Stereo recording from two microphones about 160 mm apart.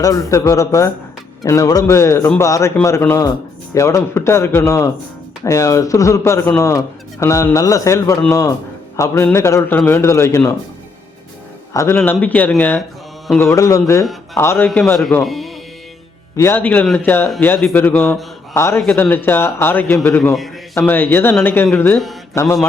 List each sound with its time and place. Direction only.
0.0 s a man's voice: 20° left (ahead or behind)
11.7 s a man's voice: 15° left (ahead or behind)
15.2 s speech: centre (ahead or behind)
16.4 s a man's voice: 15° left (ahead or behind)
18.8 s a man's voice: 5° left (ahead or behind)
21.9 s speech: centre (ahead or behind)